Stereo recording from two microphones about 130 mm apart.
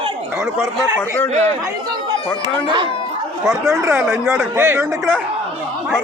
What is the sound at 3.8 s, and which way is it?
Speech, 20° right (ahead or behind).